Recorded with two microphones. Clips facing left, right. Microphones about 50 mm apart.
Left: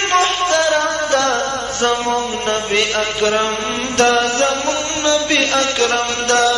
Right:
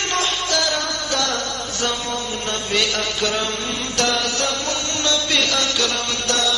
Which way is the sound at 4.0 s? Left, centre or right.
Left.